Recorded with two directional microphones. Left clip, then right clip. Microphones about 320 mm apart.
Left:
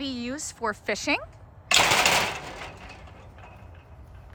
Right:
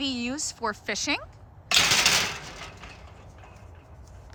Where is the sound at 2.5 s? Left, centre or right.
Left.